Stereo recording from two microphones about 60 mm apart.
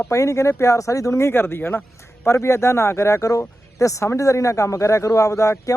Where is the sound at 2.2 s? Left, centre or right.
Left.